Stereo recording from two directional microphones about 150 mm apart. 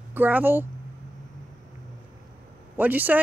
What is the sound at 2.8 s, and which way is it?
Speech, 10° right (ahead or behind).